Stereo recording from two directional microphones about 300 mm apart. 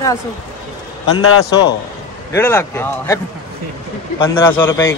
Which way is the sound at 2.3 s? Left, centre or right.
Centre.